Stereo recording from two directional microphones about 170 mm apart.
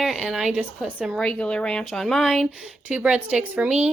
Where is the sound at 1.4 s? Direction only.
5° left (ahead or behind).